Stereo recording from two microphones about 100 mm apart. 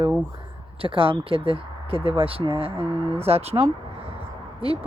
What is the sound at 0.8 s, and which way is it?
Speech, 65° right (ahead or behind).